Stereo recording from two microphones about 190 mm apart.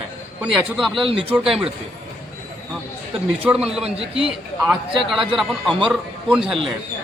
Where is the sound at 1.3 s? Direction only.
Centre (ahead or behind).